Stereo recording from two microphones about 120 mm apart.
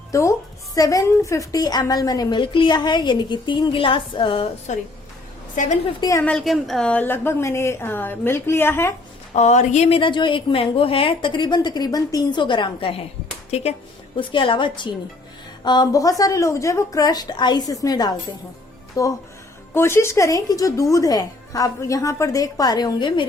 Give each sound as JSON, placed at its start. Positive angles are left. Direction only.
{"t": 0.1, "sound": "a woman's voice", "side_deg": 25}
{"t": 4.7, "sound": "a woman's voice", "side_deg": 85}
{"t": 6.0, "sound": "a woman's voice", "side_deg": 25}
{"t": 6.2, "sound": "a woman's voice", "side_deg": 5}
{"t": 9.3, "sound": "speech", "side_deg": 70}
{"t": 10.0, "sound": "a woman's voice", "side_deg": 40}
{"t": 13.5, "sound": "speech", "side_deg": 60}
{"t": 14.2, "sound": "a woman's voice", "side_deg": 45}